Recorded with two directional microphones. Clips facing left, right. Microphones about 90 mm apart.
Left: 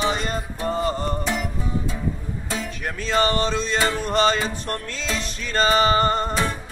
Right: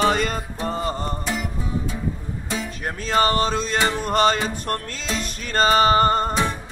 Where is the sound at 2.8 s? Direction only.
45° right (ahead or behind).